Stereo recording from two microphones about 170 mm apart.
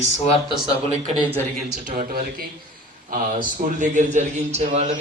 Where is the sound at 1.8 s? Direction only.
55° right (ahead or behind).